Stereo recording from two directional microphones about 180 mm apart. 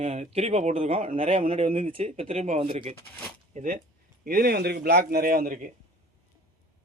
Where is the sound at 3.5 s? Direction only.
45° right (ahead or behind).